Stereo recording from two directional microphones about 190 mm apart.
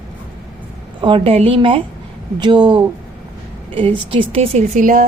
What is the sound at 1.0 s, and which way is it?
A woman's voice, 25° right (ahead or behind).